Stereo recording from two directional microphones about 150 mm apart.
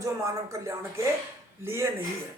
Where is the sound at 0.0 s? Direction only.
20° right (ahead or behind).